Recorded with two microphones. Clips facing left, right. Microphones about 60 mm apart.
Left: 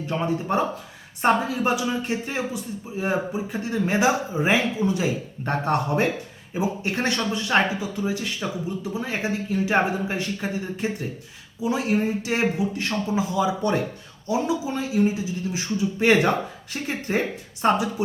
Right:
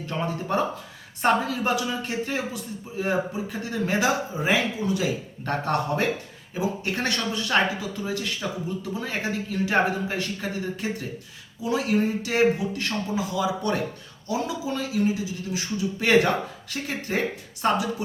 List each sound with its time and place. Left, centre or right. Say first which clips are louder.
0.5 s speech: left 2 dB; left